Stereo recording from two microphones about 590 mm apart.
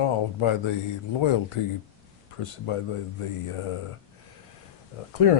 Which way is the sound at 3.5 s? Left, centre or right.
Left.